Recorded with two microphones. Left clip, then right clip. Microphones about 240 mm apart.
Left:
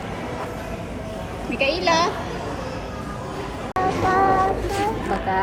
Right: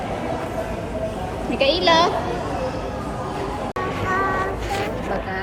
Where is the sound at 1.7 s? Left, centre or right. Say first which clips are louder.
Right 4 dB; centre.